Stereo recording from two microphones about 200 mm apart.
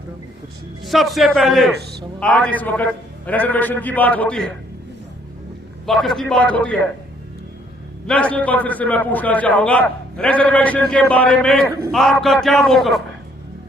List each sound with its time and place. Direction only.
0.9 s a man's voice: centre (ahead or behind)
1.8 s speech: 55° right (ahead or behind)
2.2 s a man's voice: 5° left (ahead or behind)
5.8 s a man's voice: centre (ahead or behind)
8.0 s a man's voice: 5° left (ahead or behind)